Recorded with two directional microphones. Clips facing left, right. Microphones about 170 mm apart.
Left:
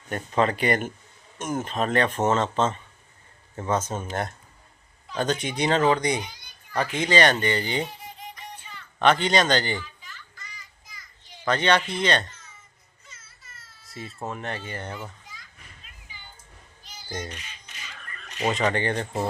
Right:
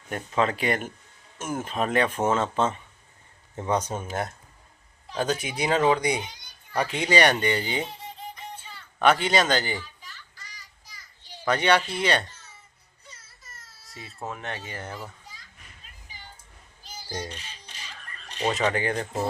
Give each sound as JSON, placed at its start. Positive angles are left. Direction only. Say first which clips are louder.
{"t": 0.1, "sound": "speech", "louder": "left 2 dB", "side_deg": 0}
{"t": 7.9, "sound": "music", "louder": "right 2 dB", "side_deg": -25}
{"t": 9.0, "sound": "speech", "louder": "left 1 dB", "side_deg": -5}
{"t": 9.8, "sound": "children playing", "louder": "left 2 dB", "side_deg": -35}
{"t": 11.4, "sound": "speech", "louder": "even", "side_deg": -10}
{"t": 13.1, "sound": "baby cry", "louder": "right 2 dB", "side_deg": -40}
{"t": 14.3, "sound": "speech", "louder": "left 2 dB", "side_deg": 0}
{"t": 17.2, "sound": "a sound", "louder": "even", "side_deg": -30}
{"t": 18.4, "sound": "speech", "louder": "left 1 dB", "side_deg": -5}